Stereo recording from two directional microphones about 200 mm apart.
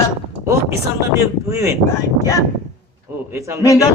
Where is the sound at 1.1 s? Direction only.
15° right (ahead or behind).